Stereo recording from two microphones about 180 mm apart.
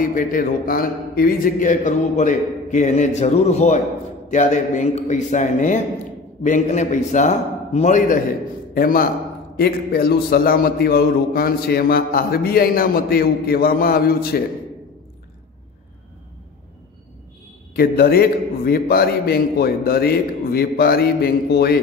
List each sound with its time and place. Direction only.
0.1 s a man's voice: 55° left (ahead or behind)
8.7 s a man's voice: 55° left (ahead or behind)
17.7 s a man's voice: 55° left (ahead or behind)